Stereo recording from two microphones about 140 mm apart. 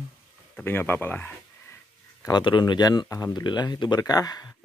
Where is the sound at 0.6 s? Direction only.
15° left (ahead or behind).